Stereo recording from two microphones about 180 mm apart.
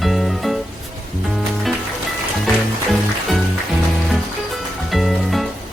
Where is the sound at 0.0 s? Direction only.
Centre (ahead or behind).